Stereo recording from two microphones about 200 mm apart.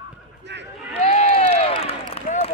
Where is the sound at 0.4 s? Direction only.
60° right (ahead or behind).